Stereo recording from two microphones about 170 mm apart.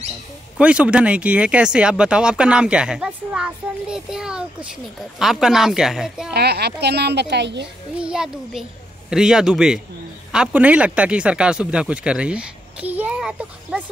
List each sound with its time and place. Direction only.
0.6 s speech: 5° right (ahead or behind)
6.3 s a woman's voice: 75° right (ahead or behind); by 7.6 s 90° right
8.0 s speech: 5° right (ahead or behind)